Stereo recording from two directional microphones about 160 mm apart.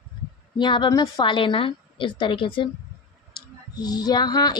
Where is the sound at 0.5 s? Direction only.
30° left (ahead or behind).